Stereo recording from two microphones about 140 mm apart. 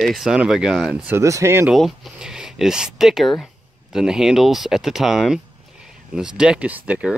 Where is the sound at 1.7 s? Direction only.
5° right (ahead or behind).